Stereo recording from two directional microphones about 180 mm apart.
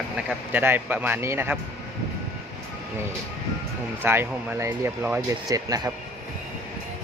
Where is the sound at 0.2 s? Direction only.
10° right (ahead or behind).